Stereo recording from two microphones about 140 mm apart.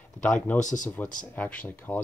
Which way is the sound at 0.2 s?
10° left (ahead or behind).